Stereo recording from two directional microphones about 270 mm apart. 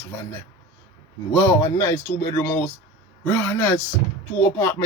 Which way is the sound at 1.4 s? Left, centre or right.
Centre.